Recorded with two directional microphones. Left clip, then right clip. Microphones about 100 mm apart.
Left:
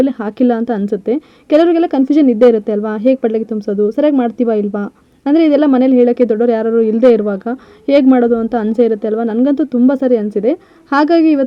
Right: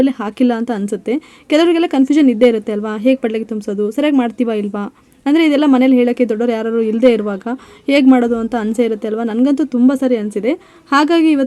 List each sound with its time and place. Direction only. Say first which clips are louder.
0.0 s speech: left 1 dB; 45° left (ahead or behind)